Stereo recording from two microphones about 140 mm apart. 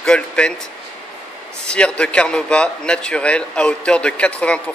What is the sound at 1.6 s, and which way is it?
Speech, 5° left (ahead or behind).